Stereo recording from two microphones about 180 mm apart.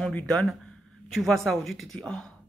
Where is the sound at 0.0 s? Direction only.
5° left (ahead or behind).